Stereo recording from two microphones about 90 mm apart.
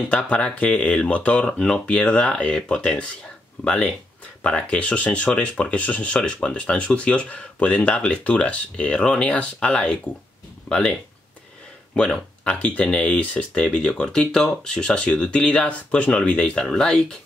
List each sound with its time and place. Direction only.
0.1 s speech: 15° left (ahead or behind)